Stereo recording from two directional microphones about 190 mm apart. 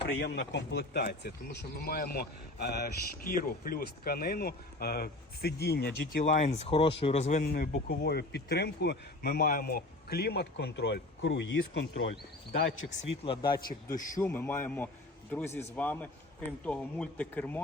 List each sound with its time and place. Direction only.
0.0 s speech: 60° left (ahead or behind)
6.2 s speech: 40° left (ahead or behind)
7.4 s speech: 50° left (ahead or behind); by 12.1 s 70° left (ahead or behind)
12.8 s speech: 50° left (ahead or behind)
13.2 s a man's voice: 25° left (ahead or behind)
14.2 s speech: 10° left (ahead or behind)